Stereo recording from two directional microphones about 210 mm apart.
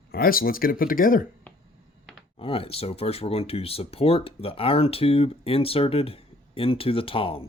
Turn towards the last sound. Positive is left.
turn(degrees=25)  # may be behind; listen again after turning